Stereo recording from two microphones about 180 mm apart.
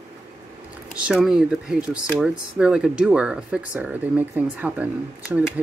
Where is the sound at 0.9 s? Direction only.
5° right (ahead or behind).